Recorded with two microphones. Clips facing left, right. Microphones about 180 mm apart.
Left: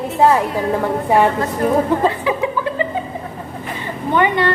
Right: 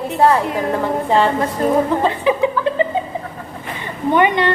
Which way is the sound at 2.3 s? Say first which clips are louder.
Right 3 dB; 20° right (ahead or behind).